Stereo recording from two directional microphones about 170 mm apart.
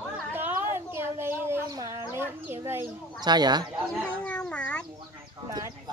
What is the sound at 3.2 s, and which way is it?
Speech, 25° right (ahead or behind).